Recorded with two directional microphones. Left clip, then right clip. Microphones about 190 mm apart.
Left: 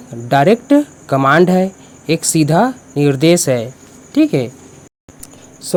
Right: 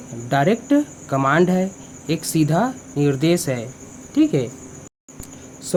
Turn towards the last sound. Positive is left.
turn(degrees=25)  # may be behind; listen again after turning